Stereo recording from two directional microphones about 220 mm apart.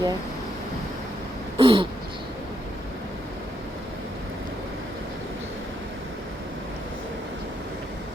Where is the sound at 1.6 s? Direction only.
25° right (ahead or behind).